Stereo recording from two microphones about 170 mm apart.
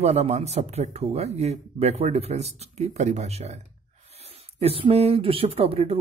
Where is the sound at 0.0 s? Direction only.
40° right (ahead or behind).